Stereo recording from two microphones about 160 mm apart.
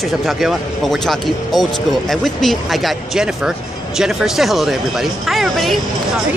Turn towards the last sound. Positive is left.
turn(degrees=0)  # may be behind; listen again after turning